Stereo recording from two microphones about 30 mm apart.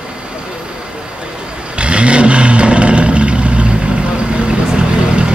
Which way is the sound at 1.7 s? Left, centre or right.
Right.